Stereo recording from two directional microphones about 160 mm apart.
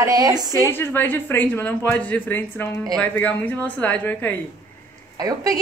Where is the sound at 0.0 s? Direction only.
25° right (ahead or behind).